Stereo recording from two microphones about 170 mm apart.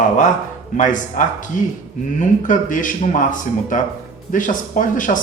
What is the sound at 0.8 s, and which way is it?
Speech, 50° left (ahead or behind).